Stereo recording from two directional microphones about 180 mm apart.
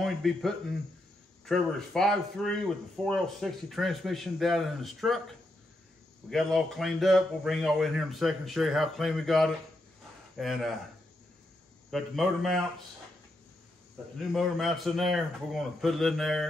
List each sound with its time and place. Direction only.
0.0 s speech: centre (ahead or behind)
6.3 s speech: centre (ahead or behind)
11.9 s speech: centre (ahead or behind)
14.3 s speech: centre (ahead or behind)